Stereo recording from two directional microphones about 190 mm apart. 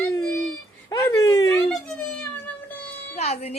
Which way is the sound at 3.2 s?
35° left (ahead or behind).